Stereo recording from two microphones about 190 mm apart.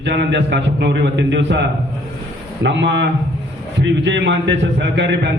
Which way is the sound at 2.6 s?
70° right (ahead or behind).